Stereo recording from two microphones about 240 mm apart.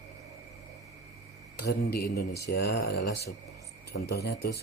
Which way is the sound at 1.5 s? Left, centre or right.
Left.